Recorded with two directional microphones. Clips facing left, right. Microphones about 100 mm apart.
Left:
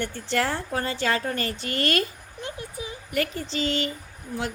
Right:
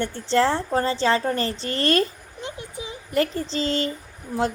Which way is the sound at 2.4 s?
20° right (ahead or behind).